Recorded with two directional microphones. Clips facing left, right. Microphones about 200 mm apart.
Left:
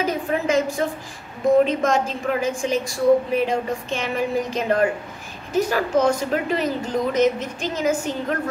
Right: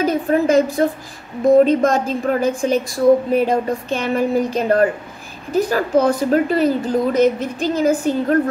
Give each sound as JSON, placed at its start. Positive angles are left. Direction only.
{"t": 0.0, "sound": "a woman's voice", "side_deg": -35}